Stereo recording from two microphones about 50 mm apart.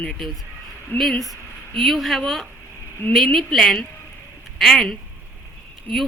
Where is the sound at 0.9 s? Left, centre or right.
Left.